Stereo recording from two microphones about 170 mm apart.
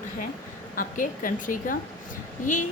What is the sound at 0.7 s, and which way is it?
A woman's voice, 55° left (ahead or behind).